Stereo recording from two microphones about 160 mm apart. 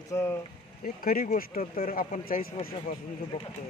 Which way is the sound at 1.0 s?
65° left (ahead or behind).